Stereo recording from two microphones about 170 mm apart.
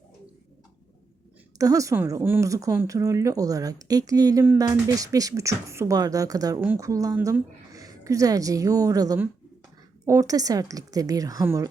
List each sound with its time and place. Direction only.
1.5 s a woman's voice: 20° right (ahead or behind)